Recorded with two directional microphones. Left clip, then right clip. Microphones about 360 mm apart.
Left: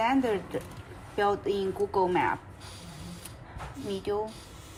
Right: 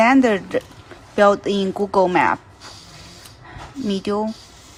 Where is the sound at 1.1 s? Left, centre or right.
Centre.